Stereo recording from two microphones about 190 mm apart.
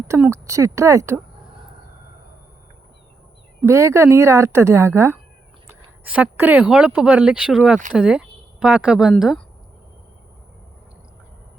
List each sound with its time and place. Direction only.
0.1 s a woman's voice: 15° right (ahead or behind)
3.7 s a woman's voice: 15° right (ahead or behind)